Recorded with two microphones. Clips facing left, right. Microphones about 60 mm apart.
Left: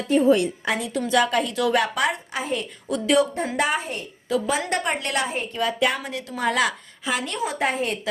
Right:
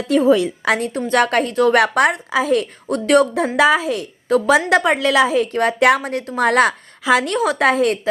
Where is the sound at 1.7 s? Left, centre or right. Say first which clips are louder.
Right 6 dB; right.